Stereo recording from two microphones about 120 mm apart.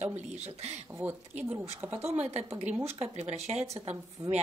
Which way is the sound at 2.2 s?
65° right (ahead or behind).